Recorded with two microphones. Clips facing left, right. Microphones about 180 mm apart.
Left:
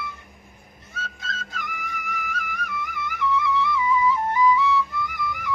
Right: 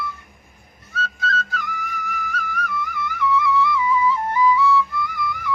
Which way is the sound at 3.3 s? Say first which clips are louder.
Right 4 dB; 20° left (ahead or behind).